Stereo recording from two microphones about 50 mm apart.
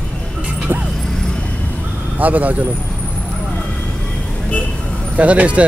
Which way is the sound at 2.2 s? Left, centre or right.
Right.